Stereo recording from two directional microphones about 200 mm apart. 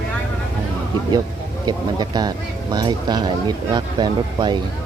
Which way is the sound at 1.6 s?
20° right (ahead or behind).